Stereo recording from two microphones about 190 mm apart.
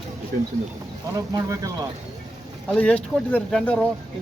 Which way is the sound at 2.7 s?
5° left (ahead or behind).